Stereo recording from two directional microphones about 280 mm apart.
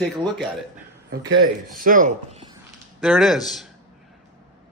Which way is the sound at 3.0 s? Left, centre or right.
Centre.